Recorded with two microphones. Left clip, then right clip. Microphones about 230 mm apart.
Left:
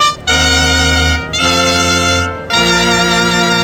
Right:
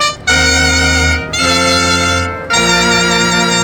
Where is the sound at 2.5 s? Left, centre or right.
Centre.